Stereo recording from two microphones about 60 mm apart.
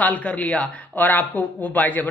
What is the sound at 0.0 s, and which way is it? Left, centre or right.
Speech, left.